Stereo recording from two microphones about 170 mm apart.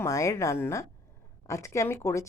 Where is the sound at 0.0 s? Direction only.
20° left (ahead or behind).